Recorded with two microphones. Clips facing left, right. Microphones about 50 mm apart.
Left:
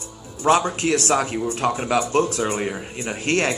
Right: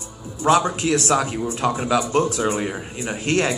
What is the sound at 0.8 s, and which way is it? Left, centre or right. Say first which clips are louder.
A man's voice: even; left.